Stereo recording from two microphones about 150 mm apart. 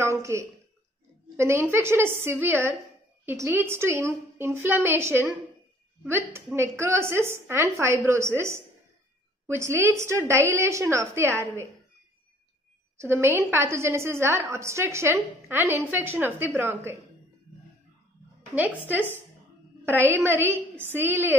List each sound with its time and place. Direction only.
0.0 s a sound: 20° right (ahead or behind)
1.3 s a woman's voice: 15° right (ahead or behind)
9.6 s a woman's voice: 20° right (ahead or behind)
12.9 s a woman's voice: 15° right (ahead or behind)
18.5 s a woman's voice: 10° right (ahead or behind)
19.8 s a woman's voice: 15° right (ahead or behind)